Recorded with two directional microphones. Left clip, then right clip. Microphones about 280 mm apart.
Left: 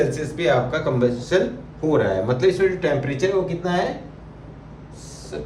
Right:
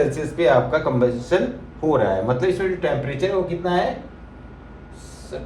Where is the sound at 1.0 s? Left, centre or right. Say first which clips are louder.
Even; centre.